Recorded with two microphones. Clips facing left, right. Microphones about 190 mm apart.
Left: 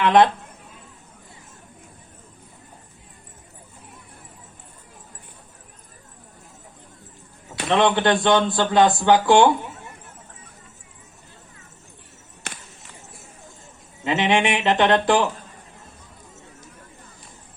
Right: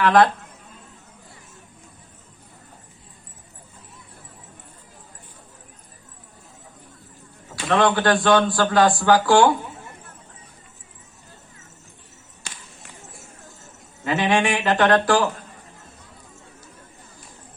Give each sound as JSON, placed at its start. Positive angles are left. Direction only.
{"t": 0.0, "sound": "speech", "side_deg": 20}
{"t": 7.7, "sound": "speech", "side_deg": 20}
{"t": 12.4, "sound": "a sound", "side_deg": 65}
{"t": 14.0, "sound": "speech", "side_deg": 20}